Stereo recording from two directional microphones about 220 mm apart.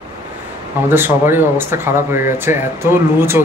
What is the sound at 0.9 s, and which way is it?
Speech, 10° right (ahead or behind).